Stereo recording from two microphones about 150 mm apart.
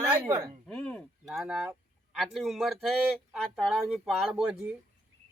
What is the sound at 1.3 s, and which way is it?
Speech, centre (ahead or behind).